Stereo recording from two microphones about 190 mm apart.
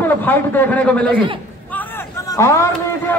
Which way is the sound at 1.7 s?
10° left (ahead or behind).